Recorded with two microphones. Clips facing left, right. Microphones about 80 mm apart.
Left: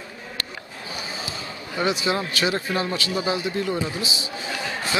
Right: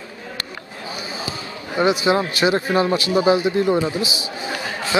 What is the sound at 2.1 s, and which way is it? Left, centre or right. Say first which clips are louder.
Speech: right 6 dB; right.